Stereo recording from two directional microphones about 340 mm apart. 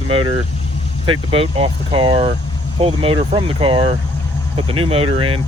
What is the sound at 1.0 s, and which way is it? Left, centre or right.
Speech, centre.